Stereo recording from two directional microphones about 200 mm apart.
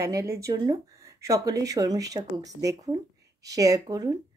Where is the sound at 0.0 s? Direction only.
15° right (ahead or behind).